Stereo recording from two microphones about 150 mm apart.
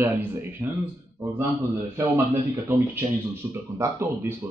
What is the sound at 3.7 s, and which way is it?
Speech, 15° right (ahead or behind).